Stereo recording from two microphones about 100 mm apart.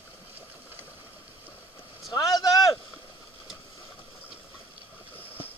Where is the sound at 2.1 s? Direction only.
40° left (ahead or behind).